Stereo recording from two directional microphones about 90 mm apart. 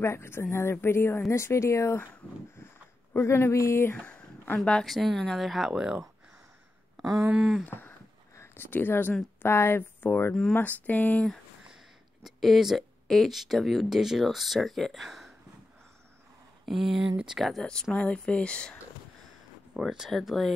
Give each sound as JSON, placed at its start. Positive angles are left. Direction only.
{"t": 0.0, "sound": "a woman's voice", "side_deg": 30}
{"t": 3.1, "sound": "speech", "side_deg": 25}
{"t": 3.9, "sound": "a sound", "side_deg": 15}
{"t": 4.6, "sound": "speech", "side_deg": 5}
{"t": 7.2, "sound": "speech", "side_deg": -10}
{"t": 7.6, "sound": "speech", "side_deg": 20}
{"t": 12.2, "sound": "speech", "side_deg": 0}
{"t": 16.6, "sound": "speech", "side_deg": -5}
{"t": 19.7, "sound": "speech", "side_deg": -5}